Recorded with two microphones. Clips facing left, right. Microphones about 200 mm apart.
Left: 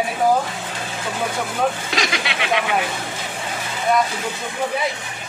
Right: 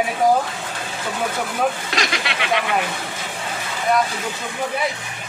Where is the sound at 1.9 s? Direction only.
Centre (ahead or behind).